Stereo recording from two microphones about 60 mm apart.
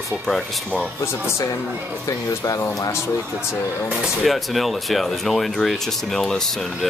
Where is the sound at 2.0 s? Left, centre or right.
Left.